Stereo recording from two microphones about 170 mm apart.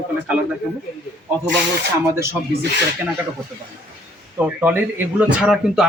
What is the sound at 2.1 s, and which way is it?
Speech, 15° right (ahead or behind).